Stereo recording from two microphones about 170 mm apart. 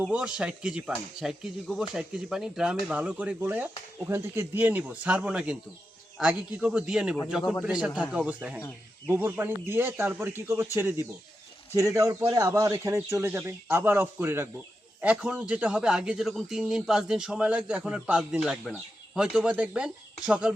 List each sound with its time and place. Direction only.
0.1 s a man's voice: 5° right (ahead or behind)